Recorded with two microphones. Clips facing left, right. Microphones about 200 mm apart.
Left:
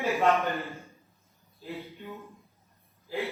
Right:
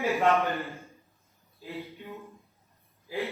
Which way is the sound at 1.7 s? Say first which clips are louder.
Even; 15° right (ahead or behind).